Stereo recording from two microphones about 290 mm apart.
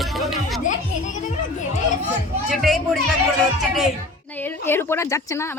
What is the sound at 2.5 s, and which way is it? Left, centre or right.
Speech, centre.